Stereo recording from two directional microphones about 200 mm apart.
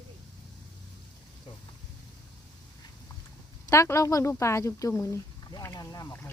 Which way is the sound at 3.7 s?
15° left (ahead or behind).